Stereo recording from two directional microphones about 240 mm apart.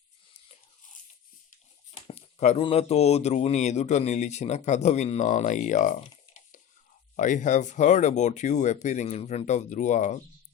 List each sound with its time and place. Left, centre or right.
2.0 s speech: left
7.2 s speech: left